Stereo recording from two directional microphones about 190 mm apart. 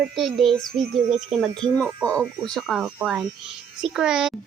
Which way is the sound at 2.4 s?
Centre (ahead or behind).